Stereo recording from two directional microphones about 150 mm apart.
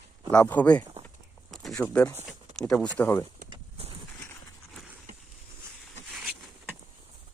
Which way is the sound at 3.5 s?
40° right (ahead or behind).